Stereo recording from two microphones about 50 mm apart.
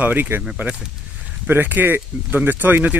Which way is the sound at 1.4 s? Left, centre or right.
Right.